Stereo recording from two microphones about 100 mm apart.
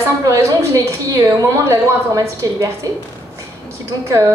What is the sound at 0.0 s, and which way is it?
A woman's voice, 30° right (ahead or behind).